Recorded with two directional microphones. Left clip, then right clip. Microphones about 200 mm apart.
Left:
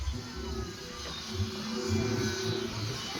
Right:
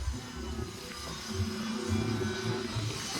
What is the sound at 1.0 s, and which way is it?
Music, 55° left (ahead or behind).